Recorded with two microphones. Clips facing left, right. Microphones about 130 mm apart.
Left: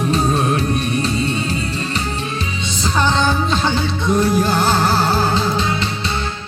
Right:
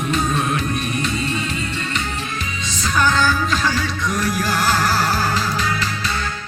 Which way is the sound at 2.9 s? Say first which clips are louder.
Left 1 dB; 30° left (ahead or behind).